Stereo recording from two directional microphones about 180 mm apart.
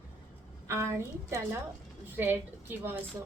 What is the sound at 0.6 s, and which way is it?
Speech, 15° right (ahead or behind).